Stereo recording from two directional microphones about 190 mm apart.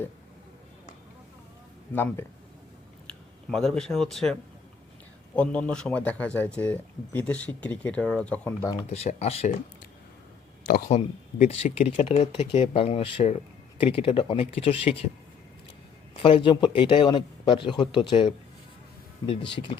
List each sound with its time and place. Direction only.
1.9 s speech: 10° left (ahead or behind)
3.5 s speech: centre (ahead or behind)
8.7 s speech: 30° left (ahead or behind)
10.7 s speech: 45° left (ahead or behind)
16.1 s speech: 25° left (ahead or behind)